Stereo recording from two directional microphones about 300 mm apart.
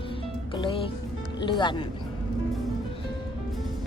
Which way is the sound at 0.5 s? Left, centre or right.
Centre.